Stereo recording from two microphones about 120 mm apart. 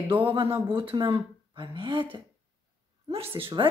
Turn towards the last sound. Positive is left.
turn(degrees=-45)  # may be behind; listen again after turning